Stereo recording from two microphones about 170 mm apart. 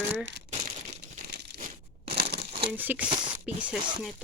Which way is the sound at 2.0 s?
65° right (ahead or behind).